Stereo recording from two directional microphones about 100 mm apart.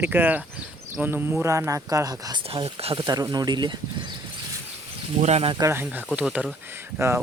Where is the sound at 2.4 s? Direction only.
75° right (ahead or behind).